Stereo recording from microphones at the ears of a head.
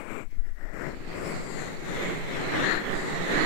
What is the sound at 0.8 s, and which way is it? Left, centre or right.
Vehicle, left.